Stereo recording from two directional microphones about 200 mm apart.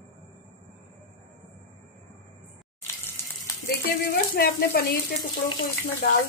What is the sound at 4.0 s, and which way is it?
Speech, 50° left (ahead or behind).